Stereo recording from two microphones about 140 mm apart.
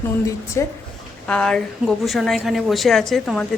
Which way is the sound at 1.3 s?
5° left (ahead or behind).